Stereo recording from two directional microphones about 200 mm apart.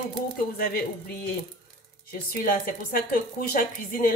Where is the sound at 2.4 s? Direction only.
45° left (ahead or behind).